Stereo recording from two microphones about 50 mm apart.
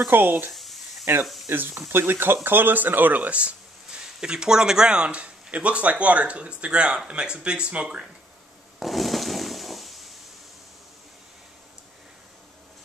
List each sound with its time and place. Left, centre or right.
0.1 s speech: right
0.5 s a sound: centre
1.2 s speech: centre
1.9 s speech: right
4.2 s speech: centre
8.7 s a sound: centre